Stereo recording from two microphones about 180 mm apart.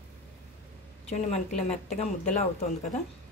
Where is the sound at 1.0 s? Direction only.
35° left (ahead or behind).